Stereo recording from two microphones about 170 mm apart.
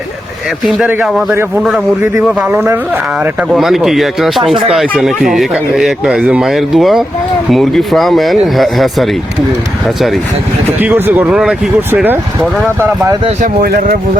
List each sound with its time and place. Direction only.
0.7 s speech: 5° right (ahead or behind)
2.5 s speech: 15° right (ahead or behind)
10.8 s speech: 10° right (ahead or behind)
13.4 s speech: 55° right (ahead or behind)